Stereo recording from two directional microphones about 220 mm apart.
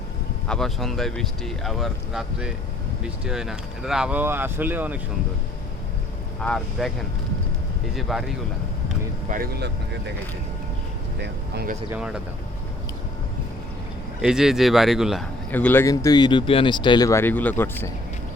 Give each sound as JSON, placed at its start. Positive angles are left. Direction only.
{"t": 0.4, "sound": "speech", "side_deg": 5}
{"t": 6.4, "sound": "speech", "side_deg": 0}
{"t": 7.9, "sound": "speech", "side_deg": 0}
{"t": 9.3, "sound": "speech", "side_deg": -45}
{"t": 11.2, "sound": "speech", "side_deg": -50}
{"t": 11.9, "sound": "speech", "side_deg": -5}
{"t": 14.2, "sound": "speech", "side_deg": 0}